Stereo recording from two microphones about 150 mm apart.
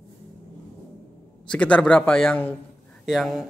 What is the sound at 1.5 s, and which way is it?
A man's voice, 10° left (ahead or behind).